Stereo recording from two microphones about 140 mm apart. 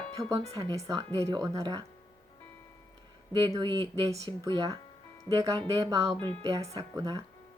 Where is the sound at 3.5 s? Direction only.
30° right (ahead or behind).